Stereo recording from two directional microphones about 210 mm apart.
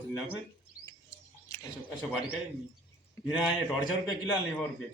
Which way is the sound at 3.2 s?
15° left (ahead or behind).